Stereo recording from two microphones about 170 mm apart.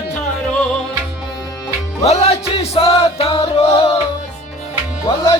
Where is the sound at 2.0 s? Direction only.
40° left (ahead or behind).